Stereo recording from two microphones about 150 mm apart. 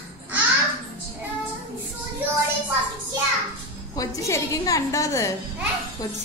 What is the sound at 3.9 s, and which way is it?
A woman's voice, 20° left (ahead or behind).